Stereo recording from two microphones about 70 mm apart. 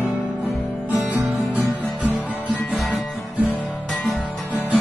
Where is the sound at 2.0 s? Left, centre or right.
Centre.